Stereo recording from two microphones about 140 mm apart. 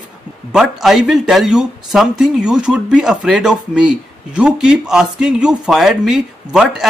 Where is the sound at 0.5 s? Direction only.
Centre (ahead or behind).